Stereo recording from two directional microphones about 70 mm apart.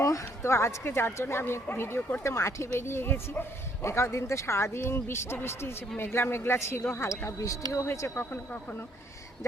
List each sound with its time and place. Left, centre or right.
0.0 s speech: left
2.2 s speech: left